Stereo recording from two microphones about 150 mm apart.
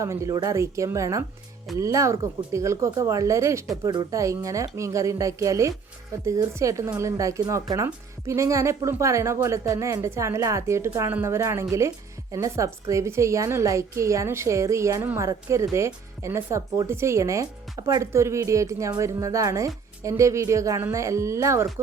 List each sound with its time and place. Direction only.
0.0 s a woman's voice: 20° right (ahead or behind)